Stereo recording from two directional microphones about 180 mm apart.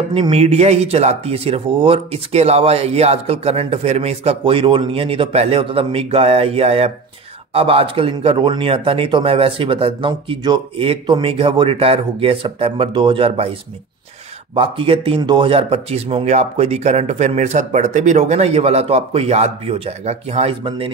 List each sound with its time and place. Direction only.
0.1 s speech: 30° right (ahead or behind)
14.5 s speech: 30° right (ahead or behind)